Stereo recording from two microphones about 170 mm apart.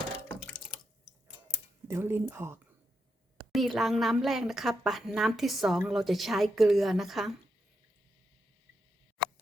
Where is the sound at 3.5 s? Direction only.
Centre (ahead or behind).